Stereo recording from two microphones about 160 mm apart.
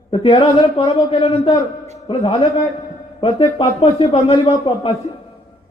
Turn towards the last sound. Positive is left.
turn(degrees=35)  # may be behind; listen again after turning